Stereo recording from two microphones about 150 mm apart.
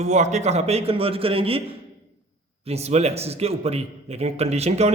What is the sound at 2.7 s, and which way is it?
A man's voice, 45° right (ahead or behind).